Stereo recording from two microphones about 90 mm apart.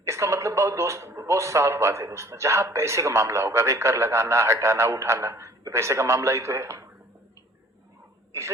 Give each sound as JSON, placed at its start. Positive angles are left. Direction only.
{"t": 0.0, "sound": "speech", "side_deg": -35}
{"t": 8.3, "sound": "speech", "side_deg": -35}